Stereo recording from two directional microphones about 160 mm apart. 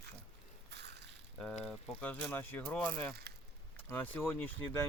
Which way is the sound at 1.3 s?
10° left (ahead or behind).